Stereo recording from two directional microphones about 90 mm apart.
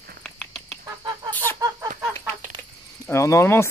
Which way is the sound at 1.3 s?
20° left (ahead or behind).